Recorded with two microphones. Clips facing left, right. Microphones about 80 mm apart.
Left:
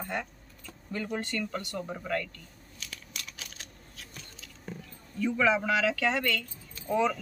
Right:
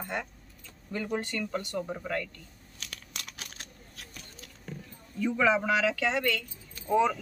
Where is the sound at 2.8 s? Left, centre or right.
Right.